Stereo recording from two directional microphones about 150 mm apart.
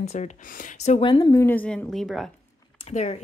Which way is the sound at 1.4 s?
10° left (ahead or behind).